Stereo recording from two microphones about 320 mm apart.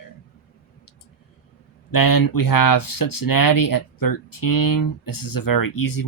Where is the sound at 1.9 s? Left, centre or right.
Left.